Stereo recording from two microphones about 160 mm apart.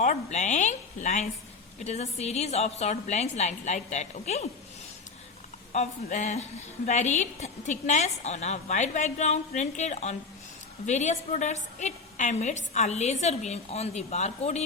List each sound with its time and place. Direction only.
0.0 s a woman's voice: 45° left (ahead or behind)
5.7 s a woman's voice: 50° left (ahead or behind)